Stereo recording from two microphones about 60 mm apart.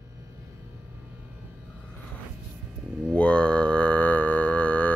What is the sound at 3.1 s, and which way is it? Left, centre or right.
Music, left.